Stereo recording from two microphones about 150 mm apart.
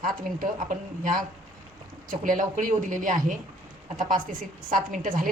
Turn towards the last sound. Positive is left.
turn(degrees=-65)  # may be behind; listen again after turning